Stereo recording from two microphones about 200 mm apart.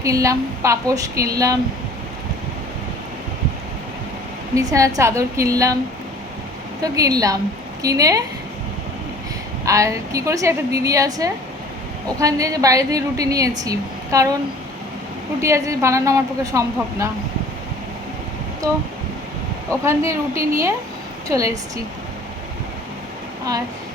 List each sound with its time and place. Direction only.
0.0 s a woman's voice: 15° right (ahead or behind)
4.5 s a woman's voice: 15° right (ahead or behind)
6.8 s a woman's voice: 15° right (ahead or behind)
9.6 s a woman's voice: 15° right (ahead or behind)
15.4 s a woman's voice: 15° right (ahead or behind)
18.6 s a woman's voice: 15° right (ahead or behind)
19.8 s a woman's voice: 15° right (ahead or behind)